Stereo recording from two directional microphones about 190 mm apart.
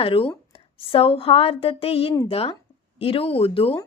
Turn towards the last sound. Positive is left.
turn(degrees=30)  # may be behind; listen again after turning